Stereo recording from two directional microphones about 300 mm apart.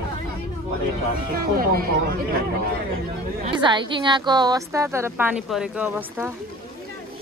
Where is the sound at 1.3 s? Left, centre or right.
Right.